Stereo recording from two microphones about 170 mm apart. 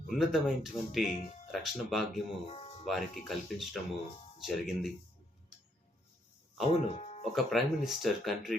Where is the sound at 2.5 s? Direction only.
35° left (ahead or behind).